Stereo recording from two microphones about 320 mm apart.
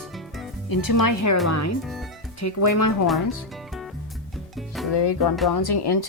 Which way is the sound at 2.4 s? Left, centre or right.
Left.